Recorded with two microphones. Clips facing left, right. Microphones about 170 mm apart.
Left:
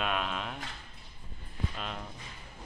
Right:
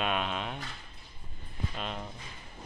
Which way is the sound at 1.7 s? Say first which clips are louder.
Right 2 dB; centre (ahead or behind).